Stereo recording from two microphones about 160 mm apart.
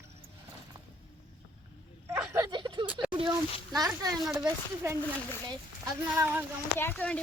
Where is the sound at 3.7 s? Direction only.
25° right (ahead or behind).